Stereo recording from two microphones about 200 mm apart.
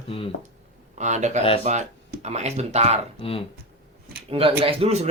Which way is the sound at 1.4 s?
30° left (ahead or behind).